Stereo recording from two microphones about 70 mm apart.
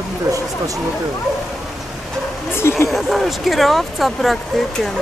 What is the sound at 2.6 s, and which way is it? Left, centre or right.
Speech, left.